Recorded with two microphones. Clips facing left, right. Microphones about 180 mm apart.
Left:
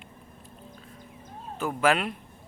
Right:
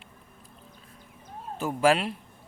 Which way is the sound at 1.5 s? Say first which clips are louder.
Right 2 dB; 35° right (ahead or behind).